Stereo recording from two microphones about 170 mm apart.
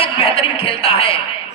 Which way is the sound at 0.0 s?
35° left (ahead or behind).